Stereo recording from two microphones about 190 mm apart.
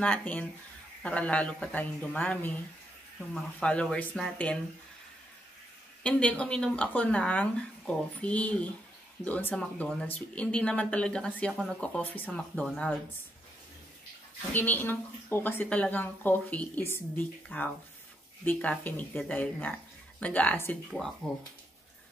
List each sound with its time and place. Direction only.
0.0 s a woman's voice: 10° left (ahead or behind)
3.5 s a woman's voice: 5° left (ahead or behind)
6.0 s a woman's voice: 5° left (ahead or behind)
14.5 s a woman's voice: 10° left (ahead or behind)